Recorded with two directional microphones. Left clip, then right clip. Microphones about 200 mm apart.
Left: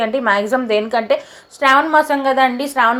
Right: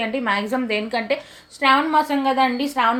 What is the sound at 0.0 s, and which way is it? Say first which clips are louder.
A woman's voice: left 6 dB; 10° left (ahead or behind).